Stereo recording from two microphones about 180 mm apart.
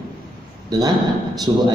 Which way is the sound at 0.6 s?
20° right (ahead or behind).